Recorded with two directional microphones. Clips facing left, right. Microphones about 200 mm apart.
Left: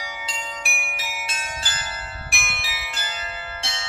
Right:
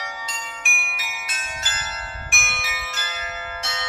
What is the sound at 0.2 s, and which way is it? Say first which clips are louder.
Bell: left 2 dB; 35° left (ahead or behind).